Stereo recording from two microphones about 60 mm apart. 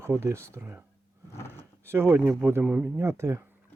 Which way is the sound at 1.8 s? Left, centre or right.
Right.